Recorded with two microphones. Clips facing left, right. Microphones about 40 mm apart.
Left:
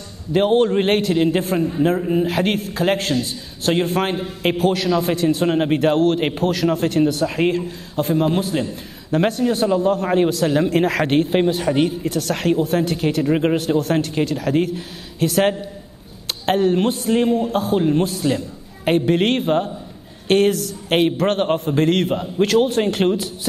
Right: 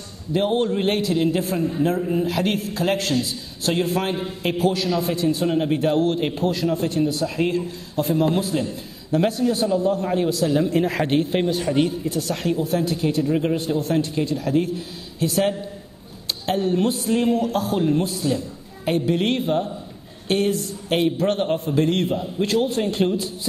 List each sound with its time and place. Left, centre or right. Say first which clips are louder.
0.3 s a man's voice: left 5 dB; left
1.1 s a man's voice: left 3 dB; left
2.2 s a man's voice: left 3 dB; left
11.1 s a man's voice: left 4 dB; left
11.9 s a man's voice: left 3 dB; left
17.2 s a man's voice: left 1 dB; left
17.9 s a man's voice: left 3 dB; left